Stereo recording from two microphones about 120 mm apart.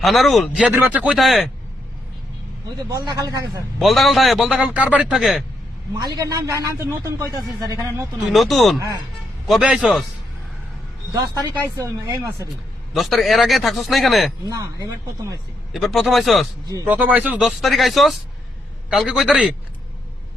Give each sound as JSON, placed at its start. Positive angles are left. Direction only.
{"t": 0.0, "sound": "a man's voice", "side_deg": 0}
{"t": 0.6, "sound": "a man's voice", "side_deg": -15}
{"t": 2.9, "sound": "speech", "side_deg": -35}
{"t": 3.8, "sound": "a man's voice", "side_deg": 0}
{"t": 5.9, "sound": "a man's voice", "side_deg": -30}
{"t": 7.6, "sound": "speech", "side_deg": -35}
{"t": 8.2, "sound": "a man's voice", "side_deg": 0}
{"t": 11.1, "sound": "a man's voice", "side_deg": -35}
{"t": 12.9, "sound": "a man's voice", "side_deg": 0}
{"t": 14.4, "sound": "a man's voice", "side_deg": -30}
{"t": 15.7, "sound": "a man's voice", "side_deg": 0}
{"t": 16.8, "sound": "a man's voice", "side_deg": -15}
{"t": 17.4, "sound": "a man's voice", "side_deg": 0}